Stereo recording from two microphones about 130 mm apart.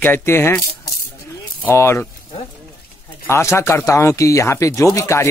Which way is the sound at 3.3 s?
20° left (ahead or behind).